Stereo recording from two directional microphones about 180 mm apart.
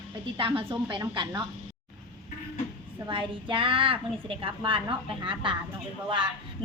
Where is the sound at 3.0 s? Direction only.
25° right (ahead or behind).